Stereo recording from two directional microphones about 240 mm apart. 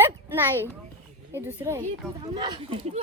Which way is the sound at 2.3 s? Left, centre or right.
Right.